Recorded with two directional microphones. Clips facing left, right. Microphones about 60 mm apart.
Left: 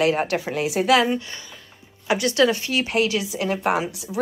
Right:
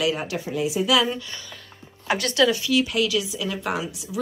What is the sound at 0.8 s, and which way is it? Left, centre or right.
Speech, left.